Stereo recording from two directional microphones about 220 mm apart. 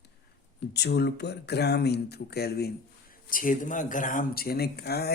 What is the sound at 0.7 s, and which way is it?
Speech, 50° left (ahead or behind).